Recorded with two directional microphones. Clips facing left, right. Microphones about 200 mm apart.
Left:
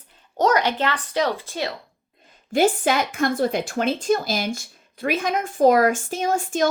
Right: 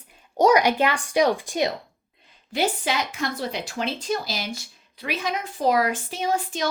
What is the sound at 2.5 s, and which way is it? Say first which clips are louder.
Speech: left 6 dB; 50° left (ahead or behind).